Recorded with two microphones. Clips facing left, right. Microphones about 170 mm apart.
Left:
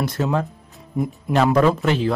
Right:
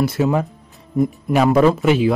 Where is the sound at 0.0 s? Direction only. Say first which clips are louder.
Right 4 dB; 5° right (ahead or behind).